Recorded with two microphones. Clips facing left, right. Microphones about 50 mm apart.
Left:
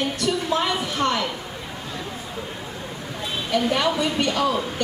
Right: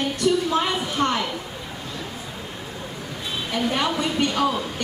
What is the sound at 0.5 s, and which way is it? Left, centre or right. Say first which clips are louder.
Speech: right 1 dB; right.